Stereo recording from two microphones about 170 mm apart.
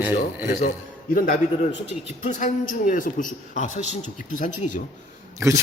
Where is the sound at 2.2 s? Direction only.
45° left (ahead or behind).